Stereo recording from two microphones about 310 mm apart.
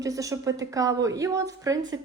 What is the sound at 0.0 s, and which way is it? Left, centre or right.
Speech, centre.